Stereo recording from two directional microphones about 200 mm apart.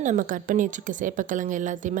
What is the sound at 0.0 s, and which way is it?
Speech, 40° right (ahead or behind).